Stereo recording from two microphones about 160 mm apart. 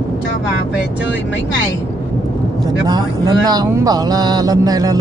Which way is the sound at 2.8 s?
25° right (ahead or behind).